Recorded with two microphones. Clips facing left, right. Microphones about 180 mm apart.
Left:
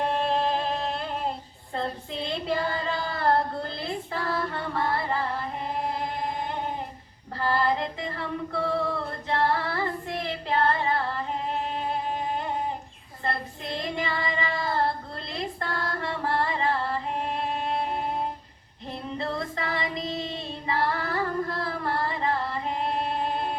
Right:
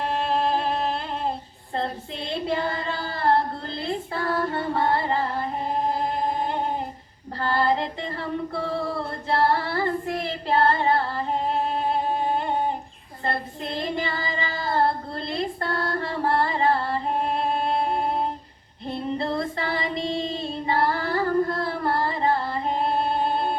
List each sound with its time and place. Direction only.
3.0 s a sound: 35° right (ahead or behind)
4.4 s music: 30° right (ahead or behind)
7.5 s singing: 35° right (ahead or behind)
11.9 s music: 30° right (ahead or behind)
13.2 s child singing: 30° right (ahead or behind)
15.3 s female singing: 30° right (ahead or behind)
16.4 s music: 35° right (ahead or behind)
18.9 s female singing: 30° right (ahead or behind)